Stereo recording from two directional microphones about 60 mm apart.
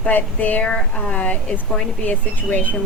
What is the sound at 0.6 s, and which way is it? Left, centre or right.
Speech, centre.